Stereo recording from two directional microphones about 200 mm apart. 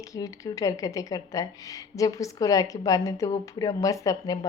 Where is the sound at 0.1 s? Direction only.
15° left (ahead or behind).